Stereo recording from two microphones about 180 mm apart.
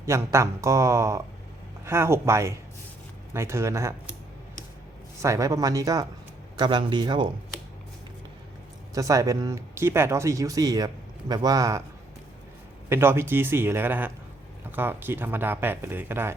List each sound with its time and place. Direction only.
0.0 s speech: 15° right (ahead or behind)
5.2 s speech: 15° right (ahead or behind)
9.0 s speech: 20° right (ahead or behind)
12.9 s speech: 15° right (ahead or behind)